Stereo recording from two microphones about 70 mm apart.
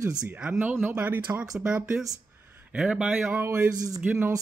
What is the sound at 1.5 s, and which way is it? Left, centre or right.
Speech, centre.